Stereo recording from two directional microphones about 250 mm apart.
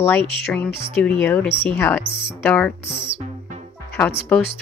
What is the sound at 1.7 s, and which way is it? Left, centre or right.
Speech, centre.